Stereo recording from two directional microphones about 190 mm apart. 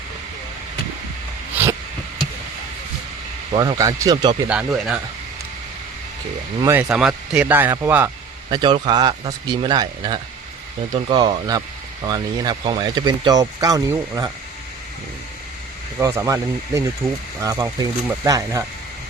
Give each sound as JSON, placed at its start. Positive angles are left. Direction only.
{"t": 1.6, "sound": "a sound", "side_deg": -10}
{"t": 3.5, "sound": "speech", "side_deg": -20}
{"t": 4.4, "sound": "speech", "side_deg": -5}
{"t": 6.6, "sound": "speech", "side_deg": -15}
{"t": 8.4, "sound": "speech", "side_deg": -25}
{"t": 16.0, "sound": "speech", "side_deg": -15}
{"t": 17.0, "sound": "speech", "side_deg": 0}
{"t": 17.4, "sound": "speech", "side_deg": -15}